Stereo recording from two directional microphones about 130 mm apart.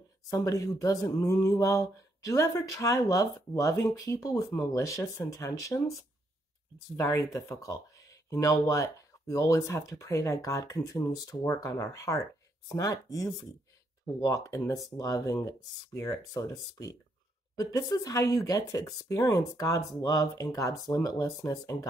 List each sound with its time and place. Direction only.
0.3 s speech: 25° left (ahead or behind)
7.0 s speech: 25° left (ahead or behind)